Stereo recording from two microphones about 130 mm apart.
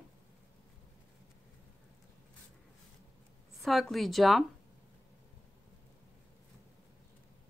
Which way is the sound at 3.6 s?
Centre (ahead or behind).